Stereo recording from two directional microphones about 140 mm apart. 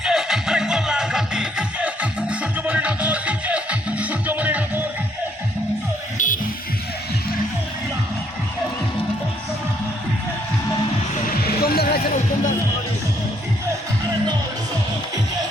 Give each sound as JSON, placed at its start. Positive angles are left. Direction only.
{"t": 0.0, "sound": "music", "side_deg": -5}
{"t": 6.1, "sound": "music", "side_deg": 65}
{"t": 11.4, "sound": "a sound", "side_deg": 90}